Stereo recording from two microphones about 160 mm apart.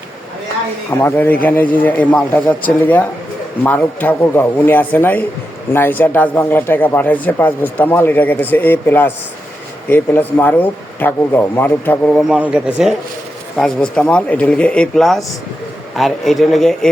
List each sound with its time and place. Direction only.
0.9 s speech: 15° left (ahead or behind)
12.3 s speech: 5° right (ahead or behind)
13.6 s speech: 5° left (ahead or behind)